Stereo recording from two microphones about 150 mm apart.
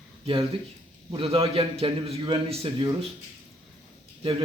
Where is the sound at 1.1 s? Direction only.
40° right (ahead or behind).